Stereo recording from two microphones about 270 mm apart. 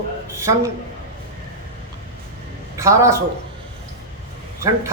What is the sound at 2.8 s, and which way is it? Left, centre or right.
Speech, centre.